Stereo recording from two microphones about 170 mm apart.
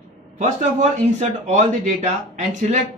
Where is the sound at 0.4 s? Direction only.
45° right (ahead or behind).